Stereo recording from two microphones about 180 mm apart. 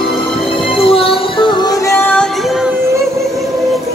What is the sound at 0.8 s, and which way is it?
Music, 30° left (ahead or behind).